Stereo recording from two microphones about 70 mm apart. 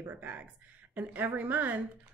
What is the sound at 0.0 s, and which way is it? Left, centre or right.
Speech, right.